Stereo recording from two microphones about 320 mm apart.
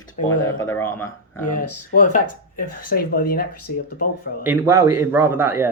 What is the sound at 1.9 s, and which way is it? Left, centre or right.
Speech, left.